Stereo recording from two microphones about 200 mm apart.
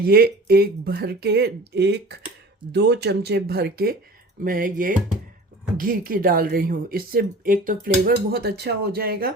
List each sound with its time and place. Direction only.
0.0 s a woman's voice: 50° right (ahead or behind)